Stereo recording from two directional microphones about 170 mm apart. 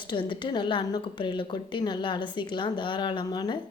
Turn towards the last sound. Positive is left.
turn(degrees=25)  # may be behind; listen again after turning